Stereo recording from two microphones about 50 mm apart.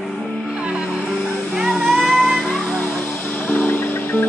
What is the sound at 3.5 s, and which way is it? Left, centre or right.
Music, left.